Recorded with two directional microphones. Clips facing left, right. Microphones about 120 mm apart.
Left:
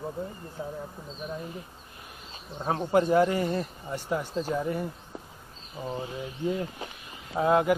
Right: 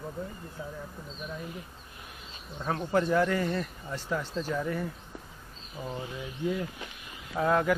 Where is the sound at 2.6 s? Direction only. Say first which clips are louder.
Left 3 dB; 35° left (ahead or behind).